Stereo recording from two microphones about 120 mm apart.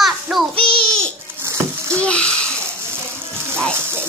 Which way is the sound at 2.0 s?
10° left (ahead or behind).